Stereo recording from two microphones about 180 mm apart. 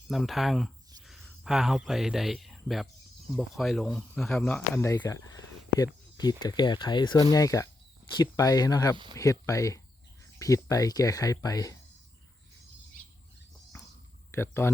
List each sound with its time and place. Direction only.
0.1 s speech: centre (ahead or behind); by 11.8 s 20° left (ahead or behind)
14.3 s speech: 15° left (ahead or behind)